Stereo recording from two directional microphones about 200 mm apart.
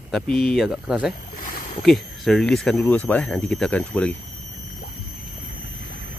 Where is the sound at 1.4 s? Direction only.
40° left (ahead or behind).